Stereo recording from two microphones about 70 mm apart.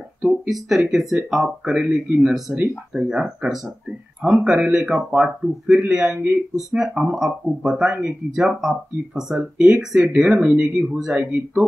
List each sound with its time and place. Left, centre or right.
0.5 s speech: centre
1.8 s speech: centre
2.3 s speech: centre